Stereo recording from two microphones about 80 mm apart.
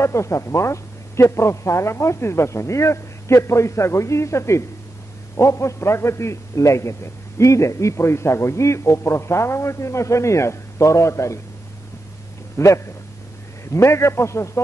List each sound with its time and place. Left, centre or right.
0.0 s a man's voice: left
12.5 s a man's voice: left